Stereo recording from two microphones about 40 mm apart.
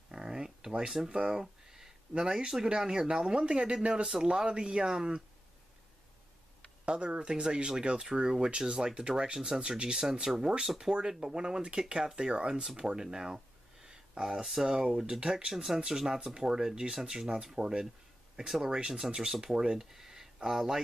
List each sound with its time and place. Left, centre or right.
0.1 s a sound: centre
1.0 s speech: right
6.9 s speech: right
15.5 s speech: centre